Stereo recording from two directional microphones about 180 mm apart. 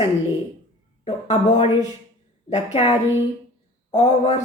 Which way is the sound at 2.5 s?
35° left (ahead or behind).